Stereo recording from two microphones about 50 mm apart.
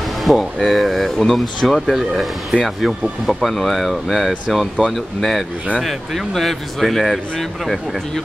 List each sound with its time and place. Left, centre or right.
0.2 s speech: centre